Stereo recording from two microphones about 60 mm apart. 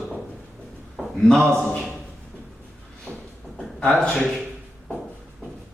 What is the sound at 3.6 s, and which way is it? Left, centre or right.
Speech, centre.